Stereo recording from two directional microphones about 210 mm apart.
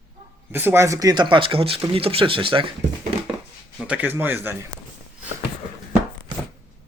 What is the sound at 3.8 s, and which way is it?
Speech, 5° right (ahead or behind).